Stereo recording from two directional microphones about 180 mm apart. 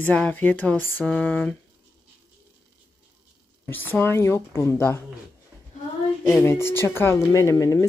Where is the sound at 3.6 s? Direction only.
10° left (ahead or behind).